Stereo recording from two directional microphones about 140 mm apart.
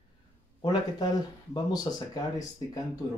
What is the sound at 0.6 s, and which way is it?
Speech, 30° left (ahead or behind).